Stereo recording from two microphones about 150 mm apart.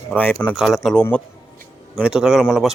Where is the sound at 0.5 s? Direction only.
Centre (ahead or behind).